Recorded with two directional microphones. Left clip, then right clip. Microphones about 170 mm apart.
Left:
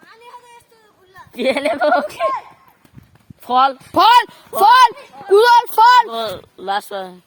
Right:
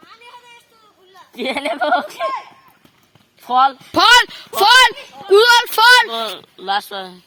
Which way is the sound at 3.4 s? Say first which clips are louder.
Even; 65° left (ahead or behind).